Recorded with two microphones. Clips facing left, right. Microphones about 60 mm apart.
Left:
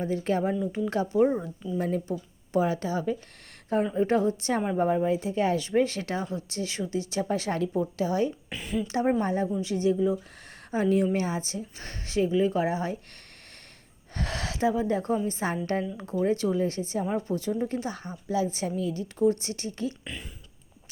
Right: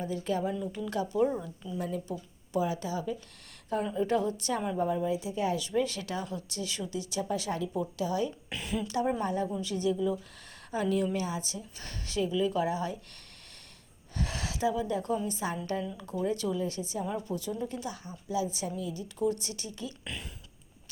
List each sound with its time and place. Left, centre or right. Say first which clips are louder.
0.0 s speech: left 5 dB; left
2.0 s speech: left 5 dB; left
4.8 s speech: left 5 dB; left
7.7 s speech: left 4 dB; left
8.4 s speech: left 3 dB; centre
8.9 s speech: left 5 dB; left
14.2 s speech: left 4 dB; left
19.2 s speech: left 6 dB; left